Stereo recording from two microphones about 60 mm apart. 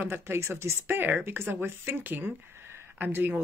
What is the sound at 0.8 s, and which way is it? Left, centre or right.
Speech, right.